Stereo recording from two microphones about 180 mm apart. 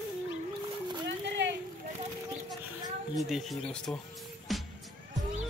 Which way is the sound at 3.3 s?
Centre (ahead or behind).